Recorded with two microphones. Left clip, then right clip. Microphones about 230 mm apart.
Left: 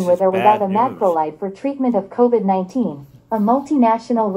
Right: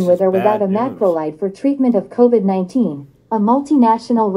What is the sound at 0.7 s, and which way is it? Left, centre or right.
A woman's voice, right.